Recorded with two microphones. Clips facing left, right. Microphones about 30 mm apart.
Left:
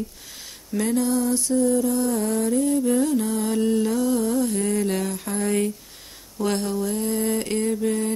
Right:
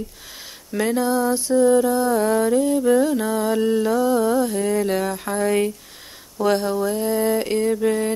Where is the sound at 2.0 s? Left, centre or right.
Right.